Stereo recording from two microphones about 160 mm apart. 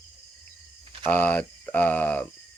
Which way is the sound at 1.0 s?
10° left (ahead or behind).